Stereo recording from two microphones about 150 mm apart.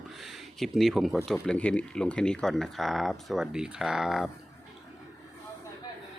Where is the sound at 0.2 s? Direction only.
Centre (ahead or behind).